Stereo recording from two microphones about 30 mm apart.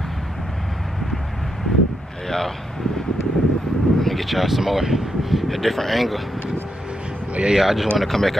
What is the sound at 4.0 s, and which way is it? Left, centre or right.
Speech, centre.